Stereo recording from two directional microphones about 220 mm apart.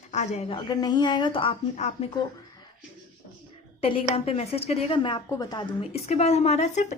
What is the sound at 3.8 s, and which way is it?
A woman's voice, 25° left (ahead or behind).